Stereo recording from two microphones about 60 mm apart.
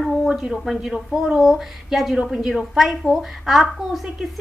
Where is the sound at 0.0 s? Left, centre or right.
Centre.